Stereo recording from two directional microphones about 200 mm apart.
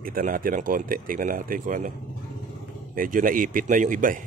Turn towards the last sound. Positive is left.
turn(degrees=-40)  # may be behind; listen again after turning